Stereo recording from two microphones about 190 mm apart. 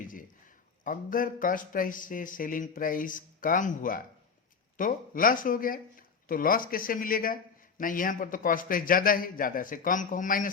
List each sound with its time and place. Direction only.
0.1 s a man's voice: 45° left (ahead or behind)